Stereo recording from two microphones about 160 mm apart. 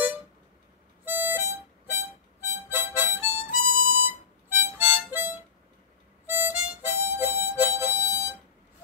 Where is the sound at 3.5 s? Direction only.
65° left (ahead or behind).